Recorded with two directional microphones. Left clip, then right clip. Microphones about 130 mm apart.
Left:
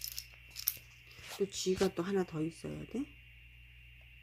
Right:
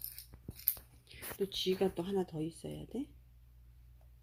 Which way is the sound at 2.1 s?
10° left (ahead or behind).